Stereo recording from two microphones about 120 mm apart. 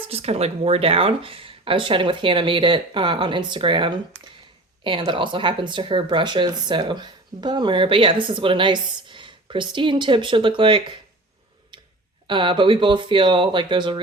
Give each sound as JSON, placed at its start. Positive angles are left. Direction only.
{"t": 0.1, "sound": "speech", "side_deg": -60}
{"t": 12.3, "sound": "speech", "side_deg": -45}